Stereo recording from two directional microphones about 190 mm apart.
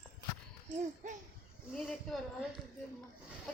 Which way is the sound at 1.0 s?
40° right (ahead or behind).